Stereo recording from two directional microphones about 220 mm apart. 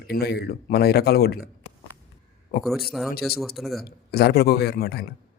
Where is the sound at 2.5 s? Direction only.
40° left (ahead or behind).